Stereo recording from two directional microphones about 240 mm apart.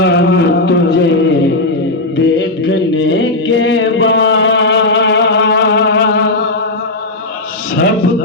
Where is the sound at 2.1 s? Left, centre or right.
Left.